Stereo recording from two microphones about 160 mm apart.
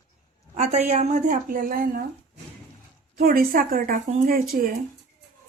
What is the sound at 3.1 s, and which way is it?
Speech, 65° right (ahead or behind).